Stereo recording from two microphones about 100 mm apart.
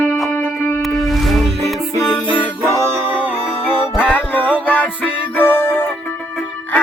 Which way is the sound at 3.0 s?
15° right (ahead or behind).